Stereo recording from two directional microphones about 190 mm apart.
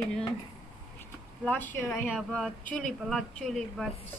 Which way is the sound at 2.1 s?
Centre (ahead or behind).